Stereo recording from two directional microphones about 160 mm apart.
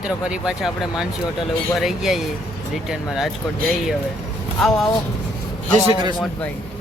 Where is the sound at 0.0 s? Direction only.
5° right (ahead or behind).